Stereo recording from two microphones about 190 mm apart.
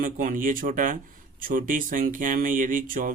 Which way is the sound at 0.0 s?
45° right (ahead or behind).